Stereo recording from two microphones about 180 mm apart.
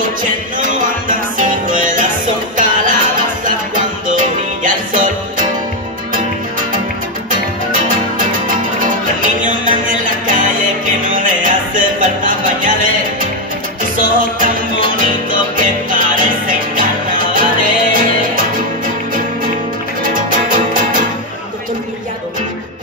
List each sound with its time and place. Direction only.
0.0 s music: 50° right (ahead or behind)
7.9 s music: 50° right (ahead or behind)
20.0 s music: 50° right (ahead or behind)